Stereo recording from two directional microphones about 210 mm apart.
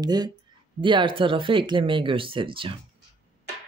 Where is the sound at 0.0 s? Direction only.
20° right (ahead or behind).